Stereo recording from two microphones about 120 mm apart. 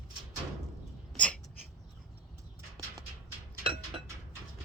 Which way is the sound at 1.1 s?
10° left (ahead or behind).